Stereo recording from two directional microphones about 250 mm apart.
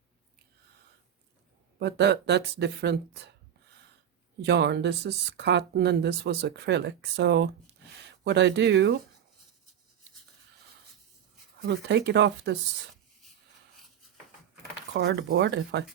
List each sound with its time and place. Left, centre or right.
1.8 s speech: right
4.4 s speech: right
11.6 s speech: right
14.9 s speech: right